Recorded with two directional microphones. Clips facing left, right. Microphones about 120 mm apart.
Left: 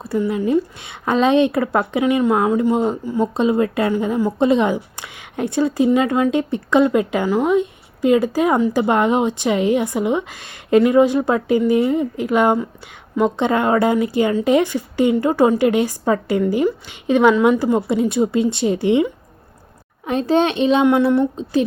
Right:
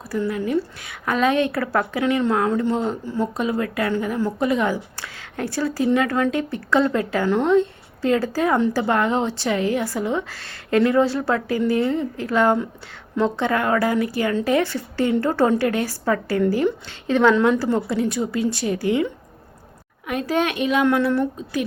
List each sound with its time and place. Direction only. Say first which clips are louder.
0.0 s a woman's voice: left 4 dB; 25° left (ahead or behind)
7.3 s a woman's voice: left 1 dB; 5° left (ahead or behind)
20.1 s a woman's voice: left 5 dB; 30° left (ahead or behind)